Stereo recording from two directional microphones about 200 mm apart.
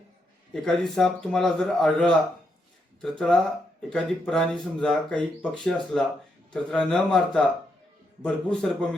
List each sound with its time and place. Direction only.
0.5 s speech: 5° left (ahead or behind)